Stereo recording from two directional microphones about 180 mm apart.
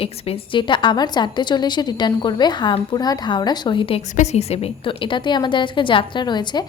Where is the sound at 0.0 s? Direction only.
30° left (ahead or behind).